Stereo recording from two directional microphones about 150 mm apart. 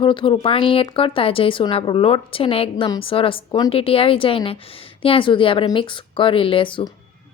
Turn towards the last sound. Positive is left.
turn(degrees=35)  # may be behind; listen again after turning